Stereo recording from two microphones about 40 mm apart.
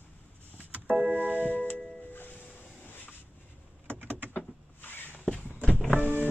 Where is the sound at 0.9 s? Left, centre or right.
Right.